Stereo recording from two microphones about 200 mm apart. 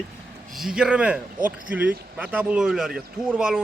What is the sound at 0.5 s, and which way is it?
A man's voice, centre (ahead or behind).